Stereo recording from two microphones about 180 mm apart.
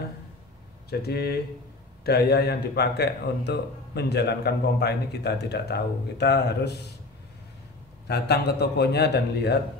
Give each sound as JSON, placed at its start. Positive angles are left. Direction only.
{"t": 0.8, "sound": "speech", "side_deg": 60}
{"t": 8.1, "sound": "speech", "side_deg": 65}